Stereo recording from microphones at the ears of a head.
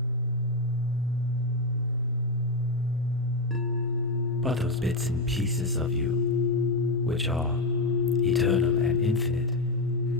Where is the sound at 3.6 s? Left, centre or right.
Left.